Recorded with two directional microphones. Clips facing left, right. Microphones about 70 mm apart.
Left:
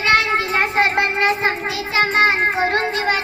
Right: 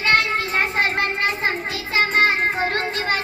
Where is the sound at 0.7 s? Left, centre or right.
Left.